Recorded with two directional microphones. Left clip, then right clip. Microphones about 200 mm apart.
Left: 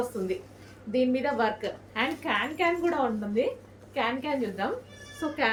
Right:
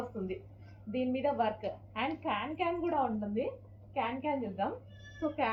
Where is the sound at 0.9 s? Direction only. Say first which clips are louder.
Left 6 dB; 25° left (ahead or behind).